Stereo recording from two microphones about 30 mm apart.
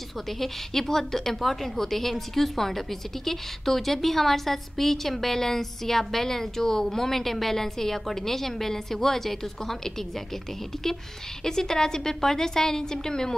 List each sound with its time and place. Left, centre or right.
0.3 s a woman's voice: centre
11.4 s a woman's voice: centre